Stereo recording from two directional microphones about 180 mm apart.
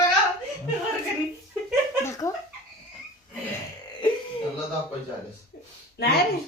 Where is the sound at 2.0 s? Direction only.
15° left (ahead or behind).